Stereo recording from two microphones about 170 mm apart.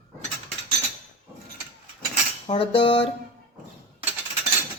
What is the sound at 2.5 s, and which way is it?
Speech, 30° left (ahead or behind).